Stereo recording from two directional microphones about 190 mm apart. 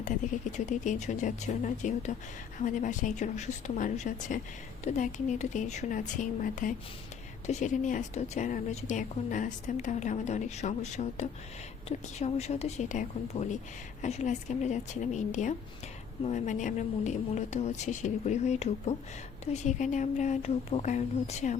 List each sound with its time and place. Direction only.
0.5 s a woman's voice: 40° left (ahead or behind)